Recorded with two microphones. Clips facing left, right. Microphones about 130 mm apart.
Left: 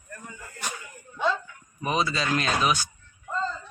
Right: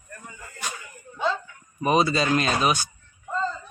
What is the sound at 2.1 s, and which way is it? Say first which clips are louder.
Speech: right 4 dB; 40° right (ahead or behind).